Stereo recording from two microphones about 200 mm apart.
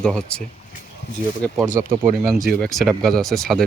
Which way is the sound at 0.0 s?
5° left (ahead or behind).